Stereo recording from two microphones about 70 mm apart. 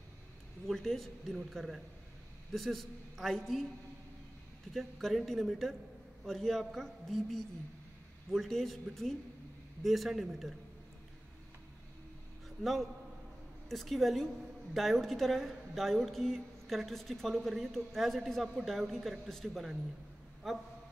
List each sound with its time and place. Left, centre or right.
0.7 s a woman's voice: centre
4.7 s a woman's voice: centre
12.4 s a man's voice: centre